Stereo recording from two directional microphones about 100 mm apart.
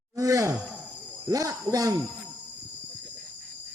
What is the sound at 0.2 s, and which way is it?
Groan, 35° right (ahead or behind).